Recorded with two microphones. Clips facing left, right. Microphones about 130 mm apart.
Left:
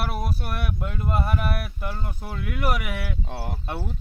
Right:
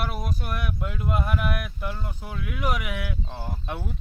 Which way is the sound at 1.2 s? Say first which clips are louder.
Left 2 dB; 40° left (ahead or behind).